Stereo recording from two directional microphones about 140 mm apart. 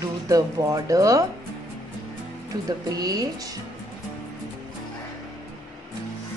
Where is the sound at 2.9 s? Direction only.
25° right (ahead or behind).